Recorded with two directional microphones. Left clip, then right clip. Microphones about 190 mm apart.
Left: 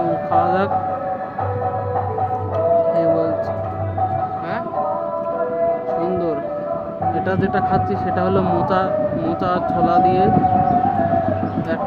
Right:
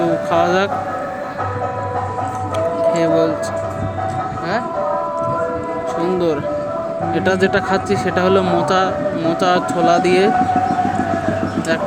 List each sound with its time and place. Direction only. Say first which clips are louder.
0.3 s a sound: right 1 dB; 15° right (ahead or behind)
2.9 s music: right 2 dB; 15° right (ahead or behind)
7.3 s speech: right 6 dB; 15° right (ahead or behind)